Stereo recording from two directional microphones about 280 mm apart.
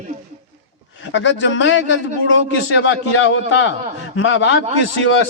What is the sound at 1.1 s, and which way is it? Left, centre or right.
A man's voice, left.